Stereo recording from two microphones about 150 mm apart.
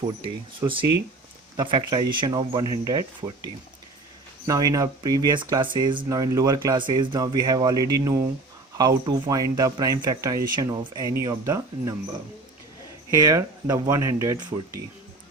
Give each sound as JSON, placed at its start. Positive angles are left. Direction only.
{"t": 0.3, "sound": "speech", "side_deg": -35}
{"t": 4.4, "sound": "speech", "side_deg": -25}
{"t": 13.1, "sound": "speech", "side_deg": -20}